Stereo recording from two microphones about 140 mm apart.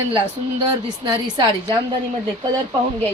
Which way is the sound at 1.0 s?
30° right (ahead or behind).